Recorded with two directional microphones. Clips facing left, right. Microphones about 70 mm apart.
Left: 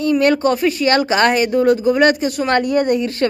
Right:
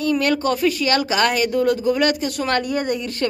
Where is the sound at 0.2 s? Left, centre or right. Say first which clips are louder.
Left 4 dB; left.